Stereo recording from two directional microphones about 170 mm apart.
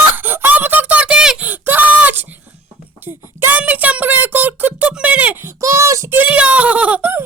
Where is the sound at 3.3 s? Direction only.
10° right (ahead or behind).